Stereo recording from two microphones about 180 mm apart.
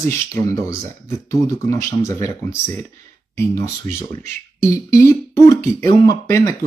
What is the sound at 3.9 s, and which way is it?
Speech, 40° right (ahead or behind).